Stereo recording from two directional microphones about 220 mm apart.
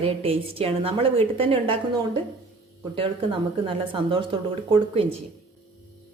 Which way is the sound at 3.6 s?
25° right (ahead or behind).